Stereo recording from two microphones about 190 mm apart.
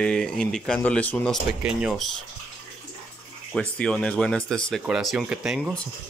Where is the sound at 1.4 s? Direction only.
5° right (ahead or behind).